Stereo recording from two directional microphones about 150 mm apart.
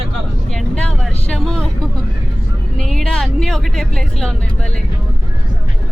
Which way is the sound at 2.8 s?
5° left (ahead or behind).